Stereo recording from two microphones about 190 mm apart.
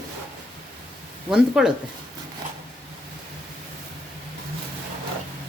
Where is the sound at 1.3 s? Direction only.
5° right (ahead or behind).